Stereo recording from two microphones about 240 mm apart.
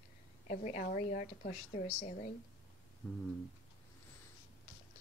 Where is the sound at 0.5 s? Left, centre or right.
Left.